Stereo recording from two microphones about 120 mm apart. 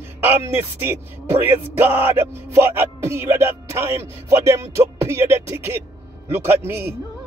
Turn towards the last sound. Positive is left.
turn(degrees=-20)  # may be behind; listen again after turning